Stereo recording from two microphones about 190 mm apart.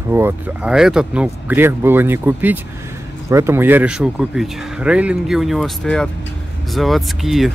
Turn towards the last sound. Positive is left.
turn(degrees=0)  # may be behind; listen again after turning